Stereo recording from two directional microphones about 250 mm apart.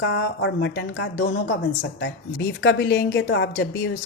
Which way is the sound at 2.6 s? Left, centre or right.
Left.